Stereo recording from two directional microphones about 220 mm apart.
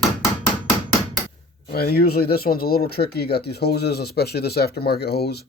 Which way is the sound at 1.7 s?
45° left (ahead or behind).